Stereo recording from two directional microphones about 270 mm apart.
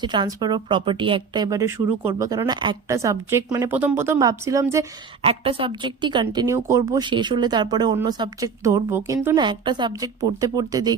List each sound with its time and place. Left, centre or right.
0.0 s speech: centre